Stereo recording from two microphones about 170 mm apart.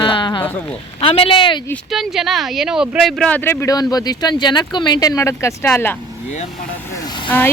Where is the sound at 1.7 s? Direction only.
Centre (ahead or behind).